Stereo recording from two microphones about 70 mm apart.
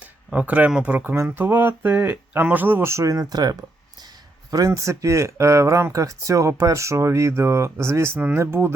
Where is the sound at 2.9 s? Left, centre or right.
Right.